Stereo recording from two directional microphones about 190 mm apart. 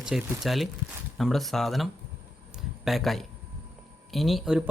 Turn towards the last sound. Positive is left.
turn(degrees=0)  # may be behind; listen again after turning